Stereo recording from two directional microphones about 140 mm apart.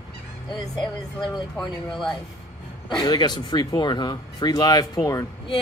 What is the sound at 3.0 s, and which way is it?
Speech, 30° left (ahead or behind).